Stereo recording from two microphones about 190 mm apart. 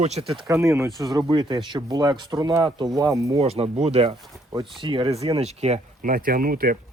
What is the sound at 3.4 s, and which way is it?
Speech, 35° right (ahead or behind).